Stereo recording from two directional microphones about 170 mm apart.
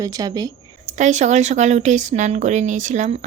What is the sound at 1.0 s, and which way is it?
A woman's voice, 45° right (ahead or behind).